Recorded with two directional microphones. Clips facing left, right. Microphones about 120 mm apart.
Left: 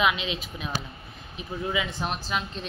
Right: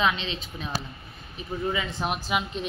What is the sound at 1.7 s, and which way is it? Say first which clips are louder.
Speech: left 1 dB; 5° left (ahead or behind).